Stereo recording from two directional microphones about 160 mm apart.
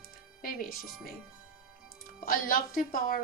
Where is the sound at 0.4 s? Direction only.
65° left (ahead or behind).